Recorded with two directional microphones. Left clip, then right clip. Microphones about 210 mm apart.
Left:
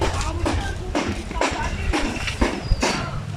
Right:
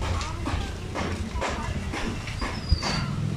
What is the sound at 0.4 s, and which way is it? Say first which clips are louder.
Music: left 7 dB; 50° left (ahead or behind).